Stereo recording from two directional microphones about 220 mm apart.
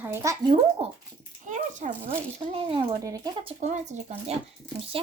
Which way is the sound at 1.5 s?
35° right (ahead or behind).